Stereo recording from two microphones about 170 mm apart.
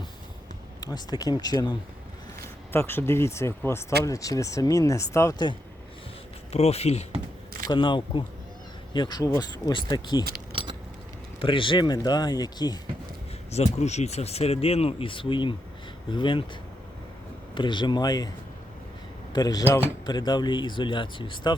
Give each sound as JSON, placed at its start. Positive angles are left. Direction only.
{"t": 0.8, "sound": "speech", "side_deg": 25}
{"t": 2.7, "sound": "speech", "side_deg": 15}
{"t": 6.5, "sound": "speech", "side_deg": 35}
{"t": 7.7, "sound": "speech", "side_deg": 30}
{"t": 10.5, "sound": "keys jangling", "side_deg": -30}
{"t": 11.3, "sound": "speech", "side_deg": 30}
{"t": 13.5, "sound": "speech", "side_deg": 40}
{"t": 17.5, "sound": "speech", "side_deg": 30}
{"t": 19.3, "sound": "speech", "side_deg": 25}